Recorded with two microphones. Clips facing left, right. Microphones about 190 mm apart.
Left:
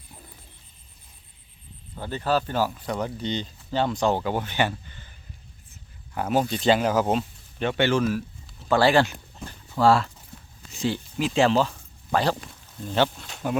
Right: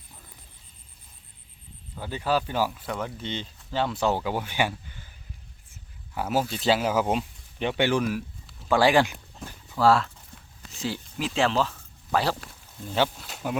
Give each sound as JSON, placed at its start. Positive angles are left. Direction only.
{"t": 2.0, "sound": "speech", "side_deg": -10}
{"t": 9.1, "sound": "dog", "side_deg": 0}
{"t": 10.3, "sound": "a sound", "side_deg": 5}
{"t": 10.7, "sound": "speech", "side_deg": 0}